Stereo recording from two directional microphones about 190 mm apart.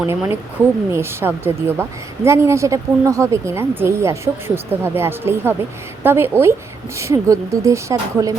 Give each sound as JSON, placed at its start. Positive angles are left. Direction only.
{"t": 0.0, "sound": "a woman's voice", "side_deg": -15}